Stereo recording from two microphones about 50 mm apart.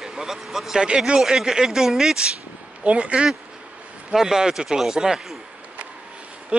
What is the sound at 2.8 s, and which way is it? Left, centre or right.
Speech, right.